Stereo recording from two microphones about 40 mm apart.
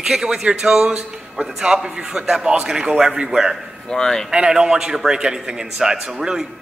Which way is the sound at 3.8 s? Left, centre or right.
Centre.